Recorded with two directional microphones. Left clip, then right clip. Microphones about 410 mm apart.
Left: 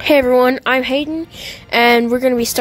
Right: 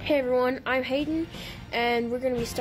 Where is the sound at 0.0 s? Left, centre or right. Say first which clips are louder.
Left 13 dB; left.